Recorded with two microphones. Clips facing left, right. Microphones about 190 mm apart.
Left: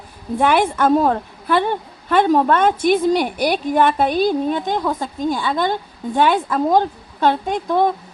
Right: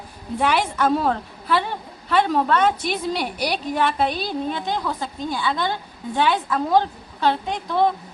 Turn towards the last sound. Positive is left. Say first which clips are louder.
# left 3 dB
turn(degrees=50)  # may be behind; listen again after turning